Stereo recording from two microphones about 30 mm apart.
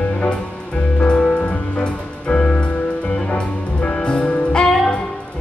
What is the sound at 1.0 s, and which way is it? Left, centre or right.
Music, left.